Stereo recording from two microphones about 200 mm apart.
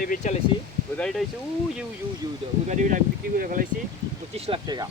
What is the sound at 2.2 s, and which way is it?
Speech, 20° right (ahead or behind).